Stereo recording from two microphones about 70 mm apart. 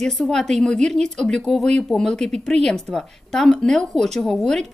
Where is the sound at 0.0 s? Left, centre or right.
Centre.